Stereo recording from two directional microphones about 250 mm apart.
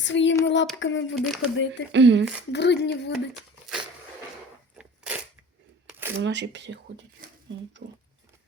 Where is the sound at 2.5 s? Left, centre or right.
Left.